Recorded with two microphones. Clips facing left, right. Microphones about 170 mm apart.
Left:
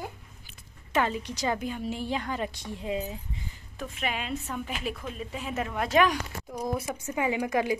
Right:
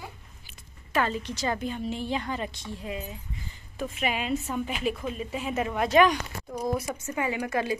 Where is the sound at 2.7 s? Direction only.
20° left (ahead or behind).